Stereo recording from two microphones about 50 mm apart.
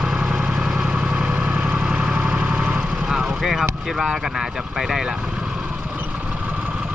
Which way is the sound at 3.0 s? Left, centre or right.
Centre.